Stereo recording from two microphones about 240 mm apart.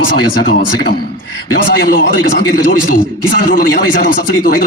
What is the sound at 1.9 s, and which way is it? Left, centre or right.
Speech, left.